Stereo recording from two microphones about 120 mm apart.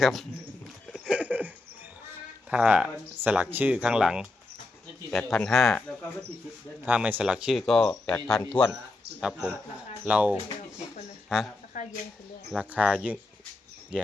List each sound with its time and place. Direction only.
0.0 s speech: centre (ahead or behind)
0.9 s a sound: 5° right (ahead or behind)
2.5 s speech: 10° right (ahead or behind)
6.8 s speech: 15° right (ahead or behind)
7.7 s speech: 5° left (ahead or behind)
9.4 s a woman's voice: 10° right (ahead or behind)
11.7 s a sound: 90° left
12.5 s speech: 10° right (ahead or behind)